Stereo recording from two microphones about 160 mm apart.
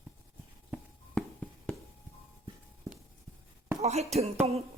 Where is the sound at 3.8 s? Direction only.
40° right (ahead or behind).